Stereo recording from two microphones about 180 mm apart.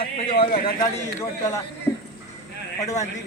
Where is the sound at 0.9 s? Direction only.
15° left (ahead or behind).